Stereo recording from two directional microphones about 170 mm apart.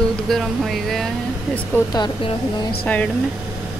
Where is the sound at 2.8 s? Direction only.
10° left (ahead or behind).